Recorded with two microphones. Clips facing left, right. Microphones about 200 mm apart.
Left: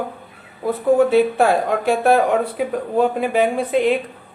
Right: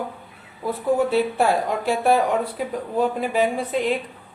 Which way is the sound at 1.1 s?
55° left (ahead or behind).